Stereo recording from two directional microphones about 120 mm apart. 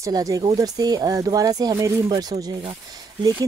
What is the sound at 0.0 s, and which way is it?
Speech, 30° right (ahead or behind).